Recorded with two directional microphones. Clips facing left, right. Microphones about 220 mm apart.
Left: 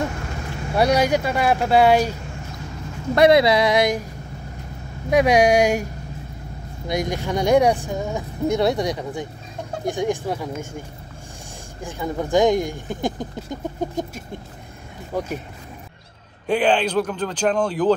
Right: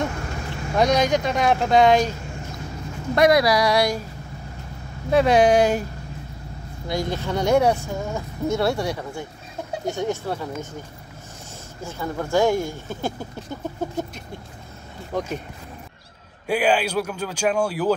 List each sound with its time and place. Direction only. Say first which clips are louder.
0.7 s speech: left 1 dB; 10° left (ahead or behind)
3.2 s speech: left 3 dB; 25° left (ahead or behind)
5.1 s speech: even; 10° left (ahead or behind)
6.9 s speech: left 2 dB; 15° left (ahead or behind)
11.8 s speech: left 2 dB; 15° left (ahead or behind)
16.4 s a man's voice: left 2 dB; 10° right (ahead or behind)